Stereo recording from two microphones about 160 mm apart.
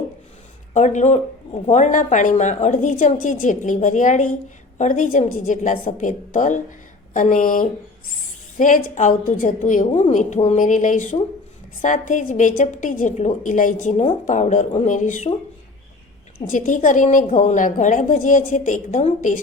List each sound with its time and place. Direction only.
0.7 s a woman's voice: 50° left (ahead or behind)
16.5 s a woman's voice: 55° left (ahead or behind)